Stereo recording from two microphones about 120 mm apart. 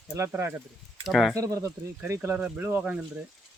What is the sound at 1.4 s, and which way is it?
Speech, 25° right (ahead or behind).